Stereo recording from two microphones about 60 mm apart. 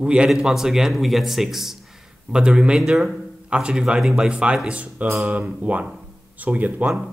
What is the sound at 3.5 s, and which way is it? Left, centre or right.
Speech, centre.